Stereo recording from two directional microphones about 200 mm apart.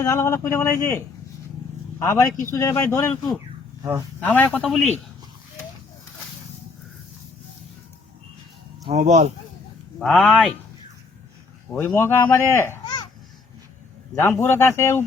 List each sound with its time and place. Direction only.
0.0 s speech: 15° left (ahead or behind)
2.0 s speech: 15° left (ahead or behind)
4.2 s speech: 10° left (ahead or behind)
8.9 s speech: 35° right (ahead or behind)
10.0 s speech: centre (ahead or behind)
11.7 s speech: 10° left (ahead or behind)
14.2 s speech: 10° left (ahead or behind)